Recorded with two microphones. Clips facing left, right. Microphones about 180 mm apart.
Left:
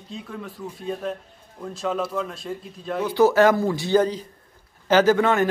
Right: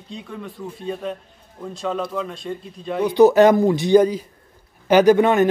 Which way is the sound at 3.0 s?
20° right (ahead or behind).